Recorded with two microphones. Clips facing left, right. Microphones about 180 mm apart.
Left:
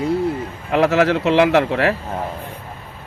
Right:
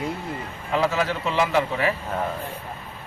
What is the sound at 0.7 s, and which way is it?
Speech, 70° left (ahead or behind).